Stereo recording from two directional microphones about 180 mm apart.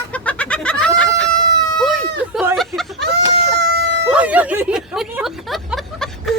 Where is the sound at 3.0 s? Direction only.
65° right (ahead or behind).